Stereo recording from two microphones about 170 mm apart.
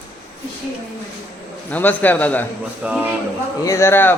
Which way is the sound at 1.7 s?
10° left (ahead or behind).